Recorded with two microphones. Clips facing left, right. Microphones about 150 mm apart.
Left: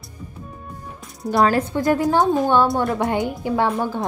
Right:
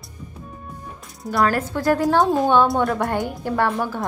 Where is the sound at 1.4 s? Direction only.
20° left (ahead or behind).